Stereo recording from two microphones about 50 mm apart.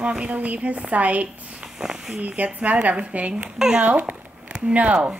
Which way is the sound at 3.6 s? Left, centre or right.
Centre.